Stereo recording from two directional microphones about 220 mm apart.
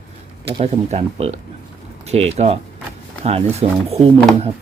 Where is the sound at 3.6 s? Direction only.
30° right (ahead or behind).